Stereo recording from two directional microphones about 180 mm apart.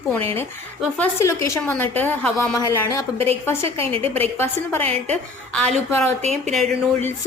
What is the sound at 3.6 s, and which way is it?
Speech, 30° right (ahead or behind).